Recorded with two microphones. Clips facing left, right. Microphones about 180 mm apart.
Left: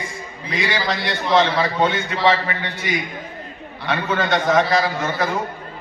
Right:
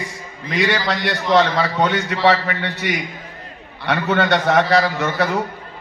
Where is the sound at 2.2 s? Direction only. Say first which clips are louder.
Right 2 dB; 70° right (ahead or behind).